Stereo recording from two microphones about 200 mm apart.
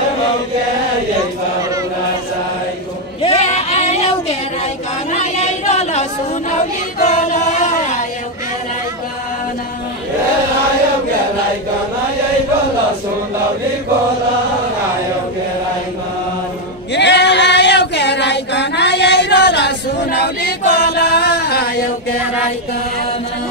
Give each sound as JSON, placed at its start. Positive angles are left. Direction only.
{"t": 3.2, "sound": "female singing", "side_deg": 30}
{"t": 5.1, "sound": "a sound", "side_deg": 35}
{"t": 6.5, "sound": "choir", "side_deg": 35}
{"t": 16.9, "sound": "female singing", "side_deg": 60}